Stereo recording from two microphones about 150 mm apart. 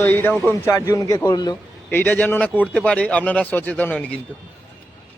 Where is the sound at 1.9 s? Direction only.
10° left (ahead or behind).